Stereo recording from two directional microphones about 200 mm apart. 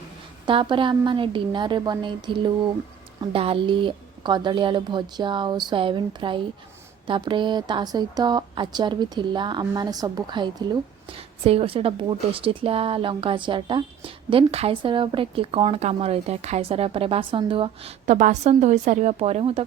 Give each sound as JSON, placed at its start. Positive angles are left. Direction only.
{"t": 0.4, "sound": "a woman's voice", "side_deg": -25}